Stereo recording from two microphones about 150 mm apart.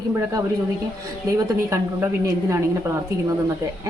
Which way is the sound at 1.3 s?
20° right (ahead or behind).